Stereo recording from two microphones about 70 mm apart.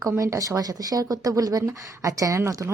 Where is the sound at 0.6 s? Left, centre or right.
Right.